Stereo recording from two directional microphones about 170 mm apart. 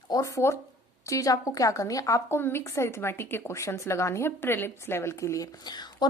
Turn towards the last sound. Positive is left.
turn(degrees=25)  # may be behind; listen again after turning